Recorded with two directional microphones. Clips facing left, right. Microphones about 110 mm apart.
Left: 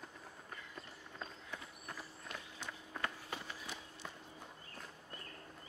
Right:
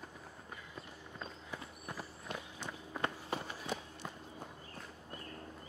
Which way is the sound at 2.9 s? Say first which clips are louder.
Right 5 dB; 25° right (ahead or behind).